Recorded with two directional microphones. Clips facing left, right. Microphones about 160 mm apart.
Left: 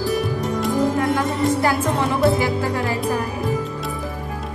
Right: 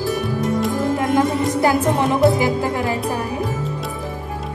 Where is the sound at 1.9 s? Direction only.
20° right (ahead or behind).